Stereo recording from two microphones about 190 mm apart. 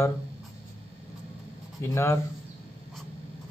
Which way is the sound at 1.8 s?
15° left (ahead or behind).